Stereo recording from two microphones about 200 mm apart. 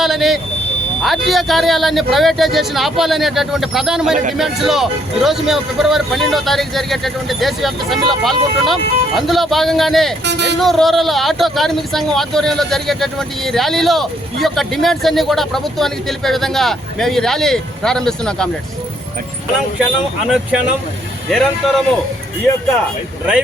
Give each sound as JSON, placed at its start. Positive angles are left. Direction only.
{"t": 0.0, "sound": "vehicle", "side_deg": 0}
{"t": 1.0, "sound": "speech", "side_deg": 0}
{"t": 10.2, "sound": "speech", "side_deg": -60}
{"t": 10.6, "sound": "speech", "side_deg": 0}
{"t": 21.2, "sound": "speech", "side_deg": 0}